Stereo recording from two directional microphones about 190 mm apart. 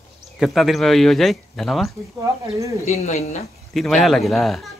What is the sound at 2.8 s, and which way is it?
Speech, 35° left (ahead or behind).